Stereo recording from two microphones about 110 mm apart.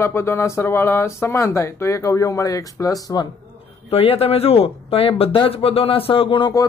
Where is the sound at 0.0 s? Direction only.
25° left (ahead or behind).